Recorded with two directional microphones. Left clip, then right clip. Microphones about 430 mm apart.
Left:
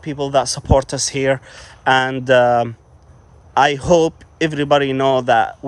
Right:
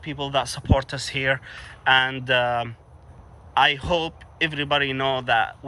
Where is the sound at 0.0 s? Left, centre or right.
Centre.